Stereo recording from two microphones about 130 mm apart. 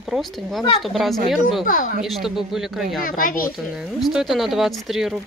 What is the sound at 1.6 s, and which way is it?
Speech, 90° left.